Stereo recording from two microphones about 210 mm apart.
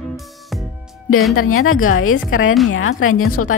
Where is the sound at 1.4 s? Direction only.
85° left.